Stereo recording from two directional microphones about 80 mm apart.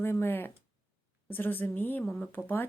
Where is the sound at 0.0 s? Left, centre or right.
Left.